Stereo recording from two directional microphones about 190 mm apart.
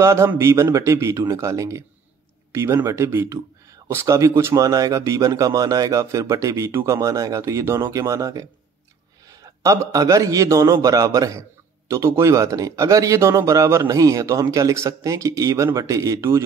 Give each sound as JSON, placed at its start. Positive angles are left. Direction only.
{"t": 0.0, "sound": "speech", "side_deg": -15}